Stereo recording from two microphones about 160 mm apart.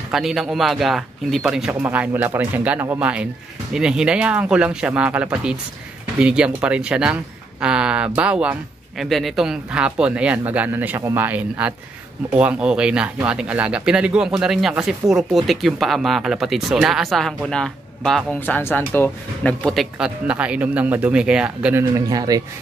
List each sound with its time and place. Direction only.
0.1 s speech: centre (ahead or behind)
21.9 s speech: 25° right (ahead or behind)